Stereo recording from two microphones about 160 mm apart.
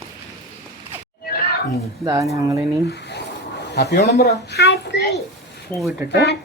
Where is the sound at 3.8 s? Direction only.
85° left.